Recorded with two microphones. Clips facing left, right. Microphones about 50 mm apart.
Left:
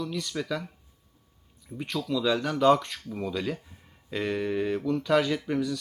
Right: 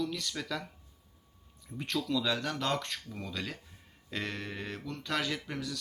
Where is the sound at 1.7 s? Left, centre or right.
Centre.